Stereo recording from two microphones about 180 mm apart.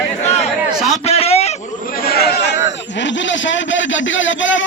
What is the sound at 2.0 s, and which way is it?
Chatter, 60° left (ahead or behind).